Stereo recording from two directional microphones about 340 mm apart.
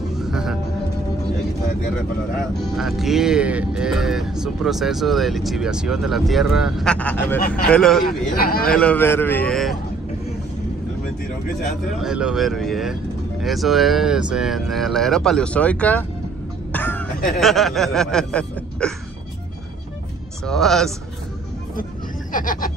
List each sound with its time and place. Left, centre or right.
0.2 s music: centre
2.6 s speech: centre
8.4 s speech: left
8.6 s speech: centre
12.0 s speech: centre
16.7 s throat clearing: centre
17.4 s speech: centre
20.4 s speech: centre
22.3 s speech: left